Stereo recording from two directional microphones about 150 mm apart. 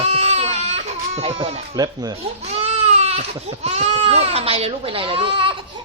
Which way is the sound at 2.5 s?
40° right (ahead or behind).